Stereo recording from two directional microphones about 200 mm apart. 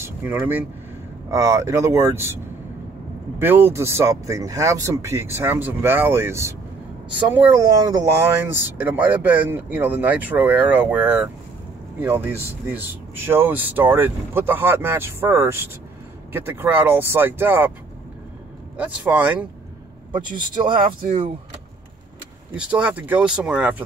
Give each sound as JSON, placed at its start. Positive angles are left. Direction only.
{"t": 0.0, "sound": "speech", "side_deg": -10}
{"t": 3.3, "sound": "speech", "side_deg": -10}
{"t": 18.8, "sound": "speech", "side_deg": -5}
{"t": 20.3, "sound": "speech", "side_deg": -25}
{"t": 22.6, "sound": "speech", "side_deg": -5}